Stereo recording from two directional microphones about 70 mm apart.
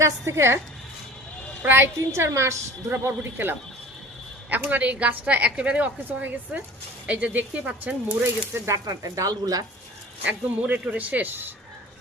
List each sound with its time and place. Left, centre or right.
0.0 s a woman's voice: right
1.6 s a woman's voice: right
4.4 s a woman's voice: right
8.7 s speech: right
10.2 s a woman's voice: right